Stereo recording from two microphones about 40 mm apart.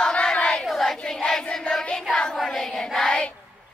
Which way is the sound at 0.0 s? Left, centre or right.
Left.